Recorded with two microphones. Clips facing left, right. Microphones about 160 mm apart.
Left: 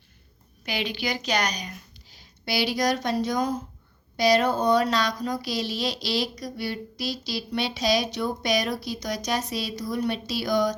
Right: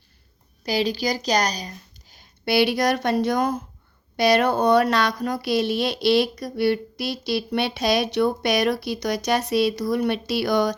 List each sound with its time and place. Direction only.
0.6 s a woman's voice: 35° right (ahead or behind)
2.0 s speech: 50° right (ahead or behind)